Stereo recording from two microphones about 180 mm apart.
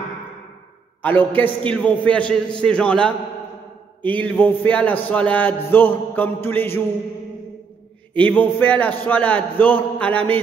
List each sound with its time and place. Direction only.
1.0 s a man's voice: 10° left (ahead or behind)
4.2 s speech: 10° left (ahead or behind)
8.1 s speech: 10° left (ahead or behind)